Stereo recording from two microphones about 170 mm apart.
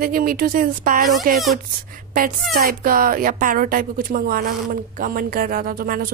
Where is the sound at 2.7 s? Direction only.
55° right (ahead or behind).